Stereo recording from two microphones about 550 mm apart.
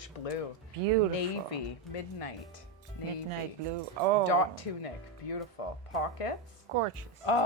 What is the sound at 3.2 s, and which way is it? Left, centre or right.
Speech, right.